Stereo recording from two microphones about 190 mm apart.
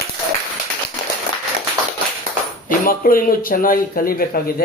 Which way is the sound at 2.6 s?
45° left (ahead or behind).